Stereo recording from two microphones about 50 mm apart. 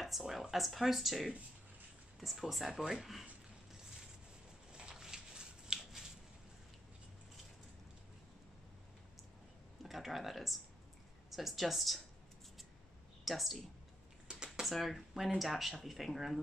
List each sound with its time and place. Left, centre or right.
0.0 s speech: centre
4.7 s a sound: centre
9.8 s speech: centre
13.2 s speech: centre
14.7 s speech: centre